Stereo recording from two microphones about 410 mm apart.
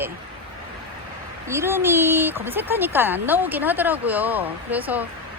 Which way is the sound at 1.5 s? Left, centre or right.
Centre.